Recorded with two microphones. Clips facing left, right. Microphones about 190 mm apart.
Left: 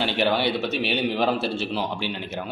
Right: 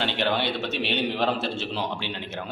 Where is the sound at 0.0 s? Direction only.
5° left (ahead or behind).